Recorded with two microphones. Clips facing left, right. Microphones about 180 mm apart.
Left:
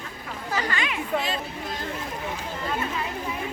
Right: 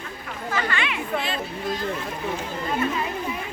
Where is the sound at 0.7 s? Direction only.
40° left (ahead or behind).